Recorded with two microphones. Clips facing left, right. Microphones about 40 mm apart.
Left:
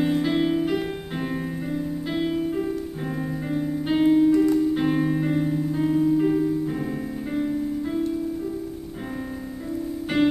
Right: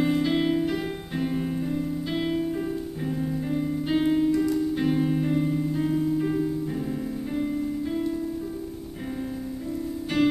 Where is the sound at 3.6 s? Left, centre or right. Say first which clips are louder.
Left 4 dB; centre.